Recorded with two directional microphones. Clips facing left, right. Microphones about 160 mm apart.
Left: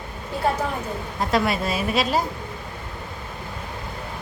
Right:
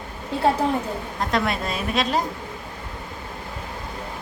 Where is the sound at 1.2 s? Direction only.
5° left (ahead or behind).